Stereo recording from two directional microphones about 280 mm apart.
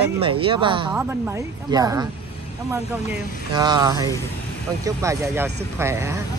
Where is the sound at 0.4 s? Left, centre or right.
Centre.